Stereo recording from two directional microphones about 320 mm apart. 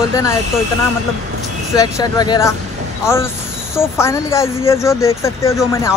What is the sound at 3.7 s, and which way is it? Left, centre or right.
Speech, centre.